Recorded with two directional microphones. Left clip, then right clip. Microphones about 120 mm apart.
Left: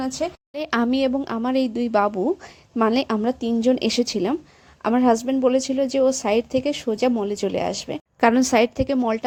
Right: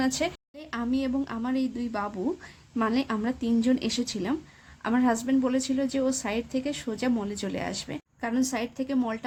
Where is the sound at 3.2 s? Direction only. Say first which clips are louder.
Left 7 dB; 50° left (ahead or behind).